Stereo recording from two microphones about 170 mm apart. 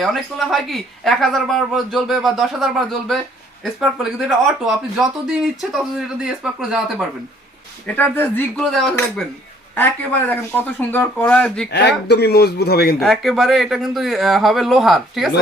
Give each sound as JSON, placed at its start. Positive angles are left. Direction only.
{"t": 0.0, "sound": "speech", "side_deg": 0}
{"t": 7.9, "sound": "speech", "side_deg": 10}
{"t": 11.7, "sound": "speech", "side_deg": 80}
{"t": 13.0, "sound": "speech", "side_deg": 0}